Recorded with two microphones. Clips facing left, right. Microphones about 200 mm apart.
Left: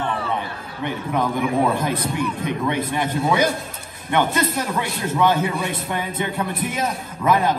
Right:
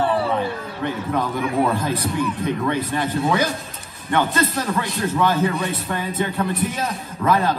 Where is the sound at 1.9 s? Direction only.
15° left (ahead or behind).